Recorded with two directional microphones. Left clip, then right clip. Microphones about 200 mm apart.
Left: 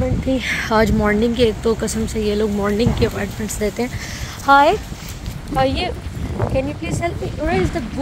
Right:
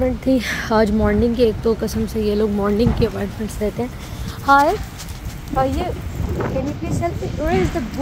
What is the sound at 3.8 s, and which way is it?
Speech, 5° right (ahead or behind).